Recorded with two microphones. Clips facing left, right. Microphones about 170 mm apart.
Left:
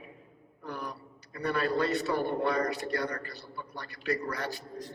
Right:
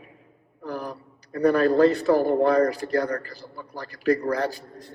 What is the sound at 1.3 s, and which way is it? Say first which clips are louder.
A man's voice: right 11 dB; 40° right (ahead or behind).